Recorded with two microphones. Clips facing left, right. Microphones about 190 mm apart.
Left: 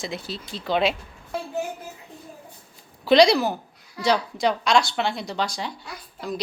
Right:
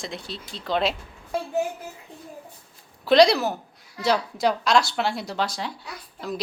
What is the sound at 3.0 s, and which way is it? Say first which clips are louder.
A woman's voice: even; centre (ahead or behind).